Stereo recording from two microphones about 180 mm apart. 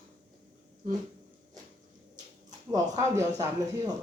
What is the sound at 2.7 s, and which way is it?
Speech, 20° right (ahead or behind).